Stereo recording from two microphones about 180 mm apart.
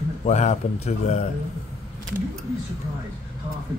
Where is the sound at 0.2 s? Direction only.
40° left (ahead or behind).